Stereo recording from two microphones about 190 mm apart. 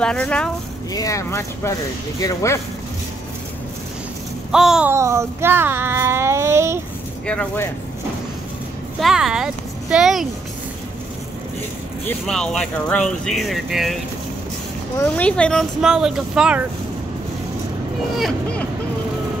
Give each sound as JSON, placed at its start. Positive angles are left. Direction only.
{"t": 0.0, "sound": "speech", "side_deg": 5}
{"t": 0.9, "sound": "speech", "side_deg": 15}
{"t": 4.5, "sound": "speech", "side_deg": -5}
{"t": 4.9, "sound": "speech", "side_deg": -15}
{"t": 7.2, "sound": "speech", "side_deg": 10}
{"t": 9.0, "sound": "speech", "side_deg": -5}
{"t": 12.1, "sound": "speech", "side_deg": 5}
{"t": 15.0, "sound": "speech", "side_deg": 5}
{"t": 18.1, "sound": "speech", "side_deg": 5}